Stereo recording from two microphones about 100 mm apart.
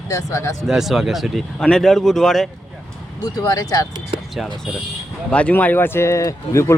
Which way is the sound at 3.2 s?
40° left (ahead or behind).